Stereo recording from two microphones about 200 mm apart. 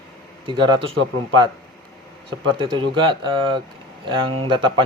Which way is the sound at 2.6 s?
25° right (ahead or behind).